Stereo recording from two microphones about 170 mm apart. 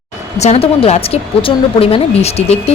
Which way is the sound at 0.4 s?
35° left (ahead or behind).